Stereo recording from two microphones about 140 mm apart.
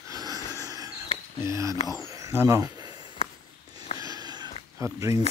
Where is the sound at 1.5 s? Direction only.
20° right (ahead or behind).